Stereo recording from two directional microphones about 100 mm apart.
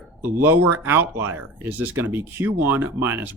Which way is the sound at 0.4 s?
20° right (ahead or behind).